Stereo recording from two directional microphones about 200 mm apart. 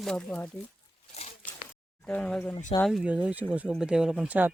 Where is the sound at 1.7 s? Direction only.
5° left (ahead or behind).